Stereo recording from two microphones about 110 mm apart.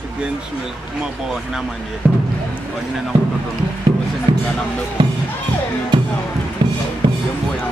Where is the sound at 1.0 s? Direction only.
5° right (ahead or behind).